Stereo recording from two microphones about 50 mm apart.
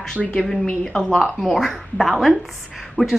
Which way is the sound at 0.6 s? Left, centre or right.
Centre.